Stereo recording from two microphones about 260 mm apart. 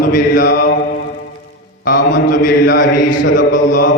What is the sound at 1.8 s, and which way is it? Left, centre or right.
Mantra, left.